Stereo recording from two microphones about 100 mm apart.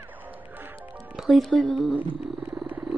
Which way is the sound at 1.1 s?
Centre (ahead or behind).